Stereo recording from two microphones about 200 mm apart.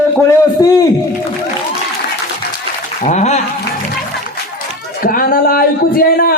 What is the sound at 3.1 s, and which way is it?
Speech, 35° left (ahead or behind).